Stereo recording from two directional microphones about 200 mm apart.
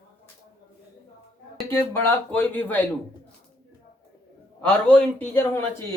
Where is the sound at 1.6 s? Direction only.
10° left (ahead or behind).